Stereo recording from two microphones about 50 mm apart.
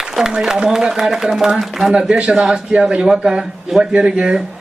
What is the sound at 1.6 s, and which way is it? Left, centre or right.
Speech, centre.